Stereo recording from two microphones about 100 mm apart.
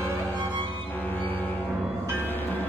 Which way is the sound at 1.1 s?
20° left (ahead or behind).